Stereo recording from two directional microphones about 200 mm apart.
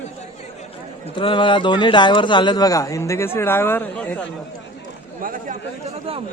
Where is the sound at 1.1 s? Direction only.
25° left (ahead or behind); by 4.3 s 5° left (ahead or behind).